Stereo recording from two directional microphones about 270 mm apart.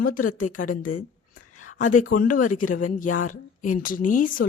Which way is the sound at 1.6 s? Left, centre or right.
Left.